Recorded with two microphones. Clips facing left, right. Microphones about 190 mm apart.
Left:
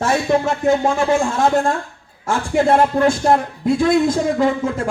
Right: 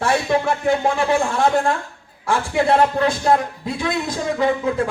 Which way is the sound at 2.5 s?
50° left (ahead or behind).